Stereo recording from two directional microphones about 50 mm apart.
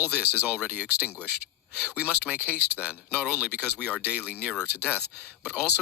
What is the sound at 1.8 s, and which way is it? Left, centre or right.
Speech, right.